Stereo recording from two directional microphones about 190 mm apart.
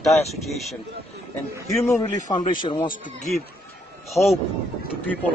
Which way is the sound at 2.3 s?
25° left (ahead or behind).